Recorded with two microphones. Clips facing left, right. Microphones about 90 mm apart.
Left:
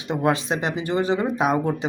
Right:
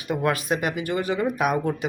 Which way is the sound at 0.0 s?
25° left (ahead or behind).